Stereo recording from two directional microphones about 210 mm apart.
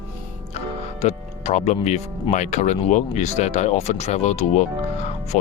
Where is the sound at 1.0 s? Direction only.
30° left (ahead or behind).